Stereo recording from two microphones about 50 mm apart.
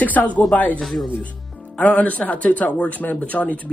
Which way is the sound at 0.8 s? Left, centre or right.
Centre.